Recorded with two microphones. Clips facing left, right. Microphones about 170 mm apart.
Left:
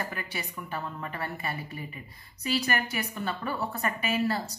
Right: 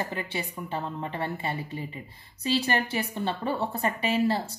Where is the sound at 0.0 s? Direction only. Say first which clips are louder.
Right 4 dB; 25° right (ahead or behind).